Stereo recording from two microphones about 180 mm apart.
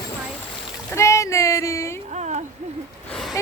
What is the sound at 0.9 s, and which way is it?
Child singing, 15° left (ahead or behind).